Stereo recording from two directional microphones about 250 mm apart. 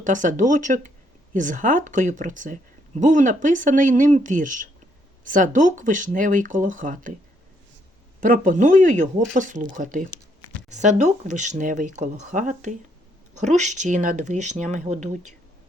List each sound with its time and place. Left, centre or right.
0.0 s speech: right
8.2 s speech: right